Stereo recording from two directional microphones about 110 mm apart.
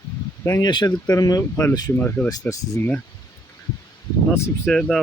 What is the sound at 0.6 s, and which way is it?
Speech, 40° left (ahead or behind).